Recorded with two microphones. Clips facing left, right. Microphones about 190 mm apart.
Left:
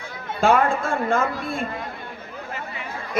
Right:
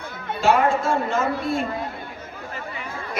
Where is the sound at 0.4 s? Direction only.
55° left (ahead or behind).